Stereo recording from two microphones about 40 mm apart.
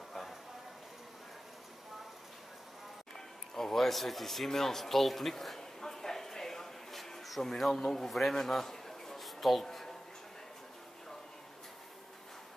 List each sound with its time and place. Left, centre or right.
3.5 s speech: centre
5.8 s a sound: centre
7.8 s a man's voice: centre